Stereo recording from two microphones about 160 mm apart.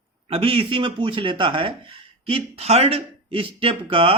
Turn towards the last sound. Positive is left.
turn(degrees=-35)  # may be behind; listen again after turning